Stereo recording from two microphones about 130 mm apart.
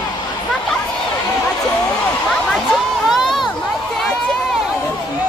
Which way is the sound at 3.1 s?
Centre (ahead or behind).